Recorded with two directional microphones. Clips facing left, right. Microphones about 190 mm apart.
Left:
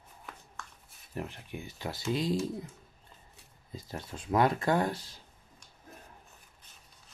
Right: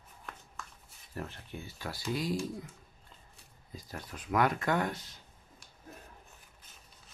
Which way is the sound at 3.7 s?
25° left (ahead or behind).